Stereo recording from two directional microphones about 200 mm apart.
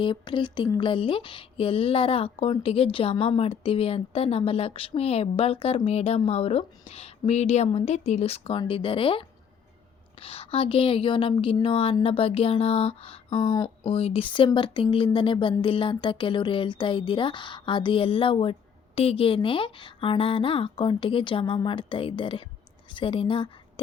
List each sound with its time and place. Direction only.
0.0 s a woman's voice: 25° left (ahead or behind)